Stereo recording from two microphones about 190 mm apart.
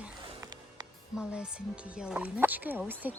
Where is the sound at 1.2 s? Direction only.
5° right (ahead or behind).